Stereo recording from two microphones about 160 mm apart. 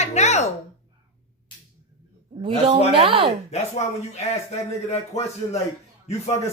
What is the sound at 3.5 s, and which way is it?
A man's voice, 45° left (ahead or behind).